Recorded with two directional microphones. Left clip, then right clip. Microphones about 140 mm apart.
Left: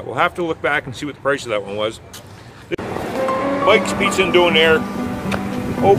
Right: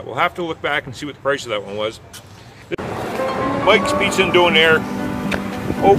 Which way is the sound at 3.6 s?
10° left (ahead or behind).